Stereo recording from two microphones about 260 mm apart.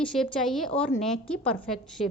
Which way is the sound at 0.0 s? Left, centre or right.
Centre.